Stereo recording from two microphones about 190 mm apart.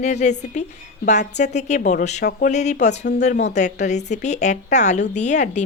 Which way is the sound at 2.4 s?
40° left (ahead or behind).